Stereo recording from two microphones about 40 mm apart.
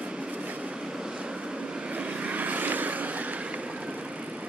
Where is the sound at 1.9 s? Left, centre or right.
Right.